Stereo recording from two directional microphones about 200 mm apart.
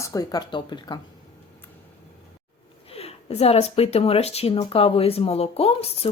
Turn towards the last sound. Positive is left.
turn(degrees=30)  # may be behind; listen again after turning